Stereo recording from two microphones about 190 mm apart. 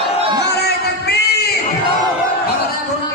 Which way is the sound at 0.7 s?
60° left (ahead or behind).